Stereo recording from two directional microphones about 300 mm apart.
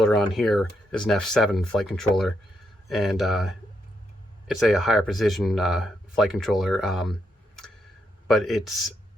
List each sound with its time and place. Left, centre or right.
0.0 s speech: centre
4.6 s speech: centre